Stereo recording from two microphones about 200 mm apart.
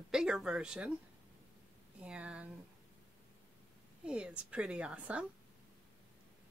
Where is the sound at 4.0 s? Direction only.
5° right (ahead or behind).